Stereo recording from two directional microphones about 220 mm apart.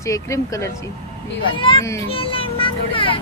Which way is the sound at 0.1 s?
15° left (ahead or behind).